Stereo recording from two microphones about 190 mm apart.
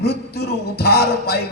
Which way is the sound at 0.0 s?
60° left (ahead or behind).